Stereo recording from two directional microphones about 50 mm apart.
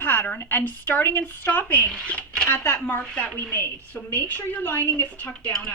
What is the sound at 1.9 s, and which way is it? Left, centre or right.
Speech, left.